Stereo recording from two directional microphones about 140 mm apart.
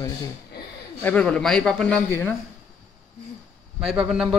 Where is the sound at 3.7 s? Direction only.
5° right (ahead or behind).